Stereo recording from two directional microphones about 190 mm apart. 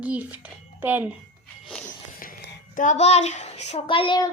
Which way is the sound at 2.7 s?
40° left (ahead or behind).